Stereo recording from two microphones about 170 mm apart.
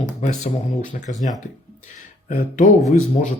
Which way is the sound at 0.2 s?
45° left (ahead or behind).